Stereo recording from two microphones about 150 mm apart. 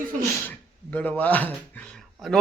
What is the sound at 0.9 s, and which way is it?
Speech, 10° left (ahead or behind).